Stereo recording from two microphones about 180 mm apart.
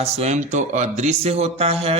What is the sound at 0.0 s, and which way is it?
Speech, 40° right (ahead or behind).